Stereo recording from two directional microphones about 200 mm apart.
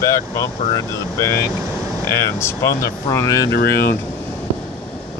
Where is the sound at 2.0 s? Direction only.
15° left (ahead or behind).